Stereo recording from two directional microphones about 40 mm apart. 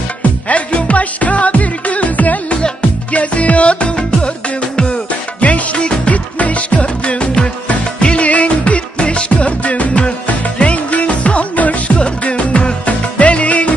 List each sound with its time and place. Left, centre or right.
0.5 s music: left
5.4 s music: left